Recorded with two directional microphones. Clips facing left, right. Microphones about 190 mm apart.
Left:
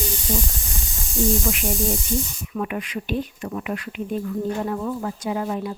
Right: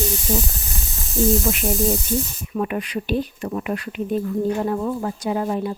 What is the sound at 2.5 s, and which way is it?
Speech, 35° right (ahead or behind).